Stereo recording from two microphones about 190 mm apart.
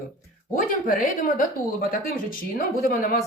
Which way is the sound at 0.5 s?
45° left (ahead or behind).